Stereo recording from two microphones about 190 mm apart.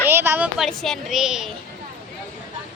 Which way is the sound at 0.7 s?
Centre (ahead or behind).